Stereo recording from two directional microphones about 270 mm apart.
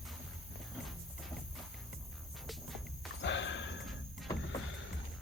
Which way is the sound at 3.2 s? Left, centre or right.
Left.